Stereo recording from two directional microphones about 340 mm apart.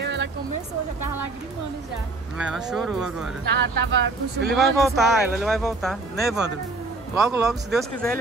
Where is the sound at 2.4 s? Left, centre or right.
Centre.